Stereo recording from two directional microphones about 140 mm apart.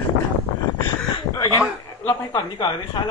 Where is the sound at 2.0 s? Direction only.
30° left (ahead or behind).